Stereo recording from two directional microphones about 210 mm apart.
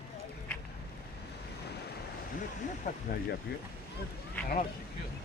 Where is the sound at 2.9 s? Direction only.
40° left (ahead or behind).